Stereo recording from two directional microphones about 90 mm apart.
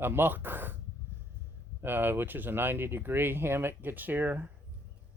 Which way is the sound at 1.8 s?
25° right (ahead or behind).